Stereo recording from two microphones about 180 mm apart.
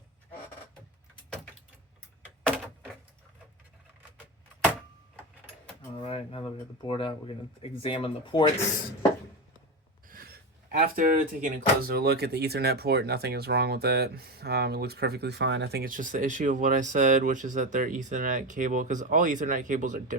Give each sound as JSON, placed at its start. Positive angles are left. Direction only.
{"t": 6.0, "sound": "speech", "side_deg": 35}
{"t": 10.1, "sound": "speech", "side_deg": -55}